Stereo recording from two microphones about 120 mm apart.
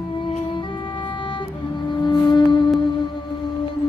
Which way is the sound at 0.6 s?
45° left (ahead or behind).